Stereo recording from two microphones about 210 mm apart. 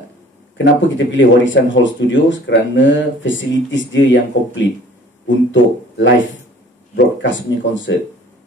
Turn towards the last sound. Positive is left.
turn(degrees=60)  # may be behind; listen again after turning